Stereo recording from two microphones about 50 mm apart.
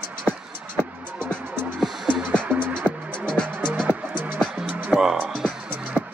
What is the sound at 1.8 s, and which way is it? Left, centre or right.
Music, centre.